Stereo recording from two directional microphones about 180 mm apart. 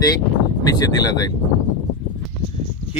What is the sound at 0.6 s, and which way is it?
Speech, 20° left (ahead or behind).